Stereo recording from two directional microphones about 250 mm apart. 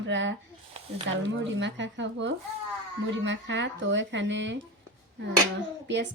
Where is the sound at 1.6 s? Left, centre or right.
Right.